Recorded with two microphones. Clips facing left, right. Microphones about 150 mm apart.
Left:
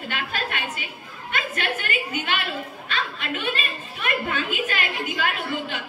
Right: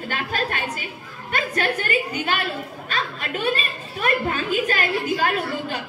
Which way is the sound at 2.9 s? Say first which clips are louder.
Right 1 dB; 40° right (ahead or behind).